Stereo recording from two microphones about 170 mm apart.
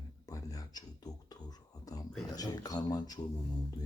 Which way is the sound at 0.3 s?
20° left (ahead or behind).